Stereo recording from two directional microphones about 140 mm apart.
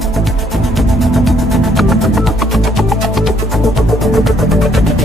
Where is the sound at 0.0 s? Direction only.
Centre (ahead or behind).